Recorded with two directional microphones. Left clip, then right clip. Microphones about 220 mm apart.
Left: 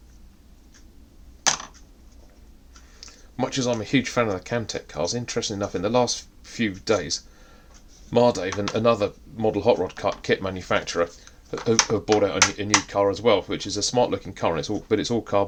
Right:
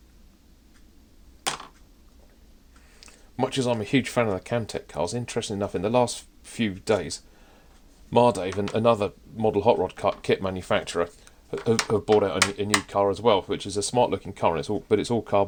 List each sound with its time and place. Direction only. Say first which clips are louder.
3.0 s speech: even; 30° right (ahead or behind)